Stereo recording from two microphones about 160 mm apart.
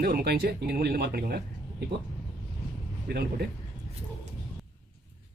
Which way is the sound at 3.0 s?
75° right (ahead or behind).